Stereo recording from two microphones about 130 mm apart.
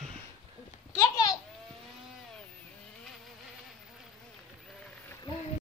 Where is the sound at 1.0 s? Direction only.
30° left (ahead or behind).